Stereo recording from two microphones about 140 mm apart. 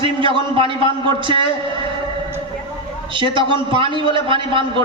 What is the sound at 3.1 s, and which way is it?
A man's voice, 35° right (ahead or behind).